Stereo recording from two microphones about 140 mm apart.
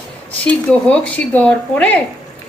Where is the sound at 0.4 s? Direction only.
10° left (ahead or behind).